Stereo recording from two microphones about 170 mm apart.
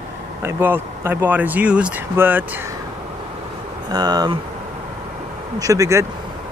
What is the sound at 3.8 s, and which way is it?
Speech, 25° right (ahead or behind).